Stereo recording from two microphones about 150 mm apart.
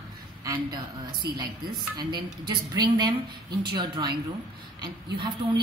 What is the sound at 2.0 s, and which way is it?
A woman's voice, 30° right (ahead or behind).